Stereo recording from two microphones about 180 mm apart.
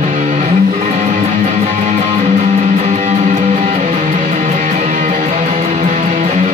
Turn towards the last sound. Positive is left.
turn(degrees=-45)  # may be behind; listen again after turning